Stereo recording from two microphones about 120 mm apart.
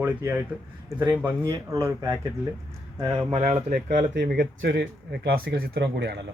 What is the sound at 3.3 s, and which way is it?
Speech, 65° right (ahead or behind).